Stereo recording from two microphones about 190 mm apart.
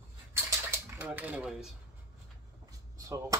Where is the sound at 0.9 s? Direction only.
10° right (ahead or behind).